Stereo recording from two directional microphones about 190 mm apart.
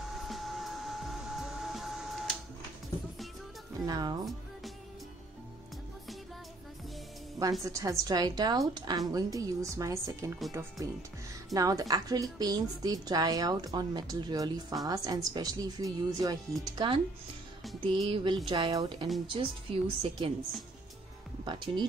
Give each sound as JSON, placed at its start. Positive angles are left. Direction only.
{"t": 0.3, "sound": "vacuum cleaner", "side_deg": 0}
{"t": 3.8, "sound": "speech", "side_deg": -20}
{"t": 7.6, "sound": "a woman's voice", "side_deg": -15}
{"t": 17.6, "sound": "music", "side_deg": 0}
{"t": 18.0, "sound": "a woman's voice", "side_deg": -30}
{"t": 21.5, "sound": "a woman's voice", "side_deg": -25}